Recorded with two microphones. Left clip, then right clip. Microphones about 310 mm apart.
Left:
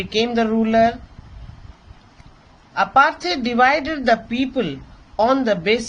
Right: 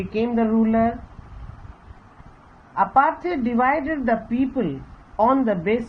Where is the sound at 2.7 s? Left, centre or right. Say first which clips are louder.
Left 3 dB; left.